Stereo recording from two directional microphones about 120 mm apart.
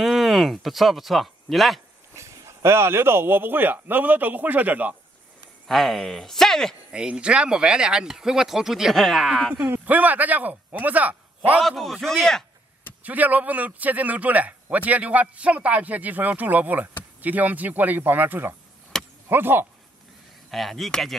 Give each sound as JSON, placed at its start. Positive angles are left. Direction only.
{"t": 0.0, "sound": "speech", "side_deg": 0}
{"t": 2.1, "sound": "a man's voice", "side_deg": -25}
{"t": 5.7, "sound": "speech", "side_deg": 0}
{"t": 6.9, "sound": "speech", "side_deg": -10}
{"t": 9.5, "sound": "a man's voice", "side_deg": -15}
{"t": 11.6, "sound": "speech", "side_deg": 0}
{"t": 13.0, "sound": "a man's voice", "side_deg": -15}
{"t": 20.5, "sound": "speech", "side_deg": 0}